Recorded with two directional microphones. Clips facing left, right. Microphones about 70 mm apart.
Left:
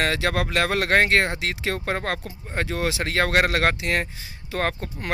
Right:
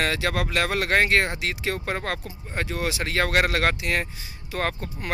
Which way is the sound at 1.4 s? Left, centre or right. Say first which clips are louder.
Left 1 dB; left.